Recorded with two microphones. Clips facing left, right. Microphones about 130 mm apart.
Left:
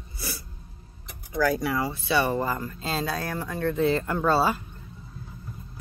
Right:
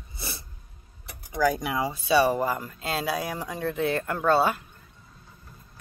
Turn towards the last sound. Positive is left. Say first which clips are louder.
# even
turn(degrees=0)  # may be behind; listen again after turning